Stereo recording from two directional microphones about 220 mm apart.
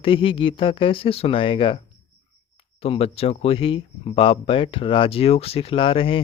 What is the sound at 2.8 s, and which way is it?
Speech, 25° left (ahead or behind).